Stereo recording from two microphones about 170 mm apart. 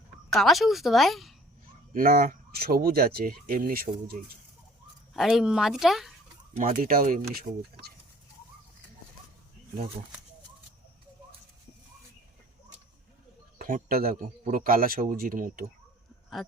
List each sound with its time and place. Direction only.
0.3 s a woman's voice: centre (ahead or behind)
1.9 s speech: 60° right (ahead or behind)
5.1 s a woman's voice: centre (ahead or behind)
6.6 s speech: 55° right (ahead or behind)
7.3 s speech: 65° right (ahead or behind)
13.6 s speech: 55° right (ahead or behind)